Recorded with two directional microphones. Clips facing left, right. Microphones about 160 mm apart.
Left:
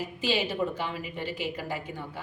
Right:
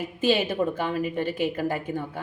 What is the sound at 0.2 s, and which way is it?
A woman's voice, 50° right (ahead or behind).